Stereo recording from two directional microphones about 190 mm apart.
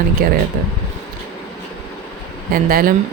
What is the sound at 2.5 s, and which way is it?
Speech, 50° right (ahead or behind).